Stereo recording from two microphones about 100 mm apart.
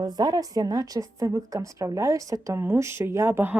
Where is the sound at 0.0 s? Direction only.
40° right (ahead or behind); by 3.6 s 20° right (ahead or behind).